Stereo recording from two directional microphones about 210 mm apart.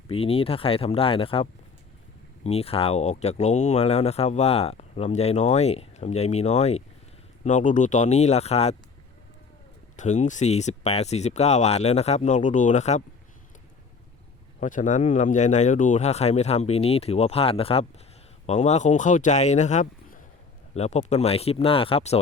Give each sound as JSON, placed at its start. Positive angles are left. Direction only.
{"t": 0.1, "sound": "speech", "side_deg": 25}
{"t": 10.0, "sound": "speech", "side_deg": 35}
{"t": 14.6, "sound": "speech", "side_deg": 35}